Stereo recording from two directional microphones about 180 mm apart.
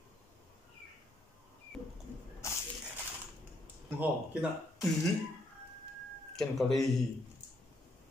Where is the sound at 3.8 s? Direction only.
5° right (ahead or behind).